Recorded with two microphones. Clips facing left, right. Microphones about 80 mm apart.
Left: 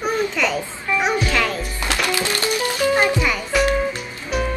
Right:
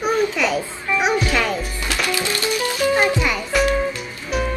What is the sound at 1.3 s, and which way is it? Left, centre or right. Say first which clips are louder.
Music: right 1 dB; centre.